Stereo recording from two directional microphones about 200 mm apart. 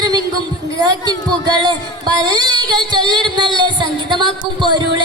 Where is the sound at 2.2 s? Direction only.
20° right (ahead or behind).